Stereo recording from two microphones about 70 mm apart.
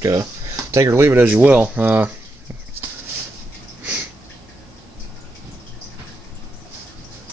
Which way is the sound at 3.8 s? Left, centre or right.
Right.